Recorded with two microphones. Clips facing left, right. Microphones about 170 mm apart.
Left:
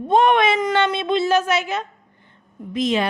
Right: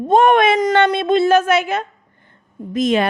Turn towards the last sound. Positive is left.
turn(degrees=-50)  # may be behind; listen again after turning